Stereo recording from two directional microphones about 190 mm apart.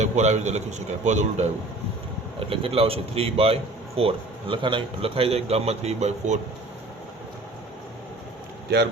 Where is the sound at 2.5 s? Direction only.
30° right (ahead or behind).